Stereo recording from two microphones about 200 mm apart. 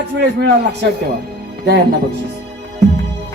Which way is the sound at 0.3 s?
55° right (ahead or behind).